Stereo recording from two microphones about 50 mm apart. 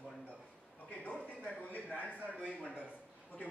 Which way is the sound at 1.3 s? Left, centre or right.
Left.